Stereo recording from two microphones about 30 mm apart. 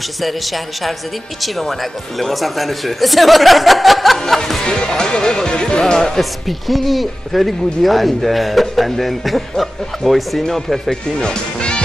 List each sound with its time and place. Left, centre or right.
0.2 s speech: centre
4.6 s speech: left
5.9 s speech: centre
6.7 s speech: centre
11.1 s music: left